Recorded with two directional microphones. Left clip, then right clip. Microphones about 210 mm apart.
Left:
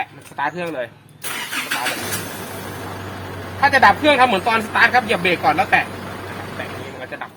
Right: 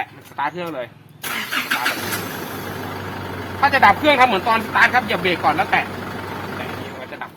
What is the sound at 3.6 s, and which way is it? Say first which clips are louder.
Speech: left 1 dB; 15° left (ahead or behind).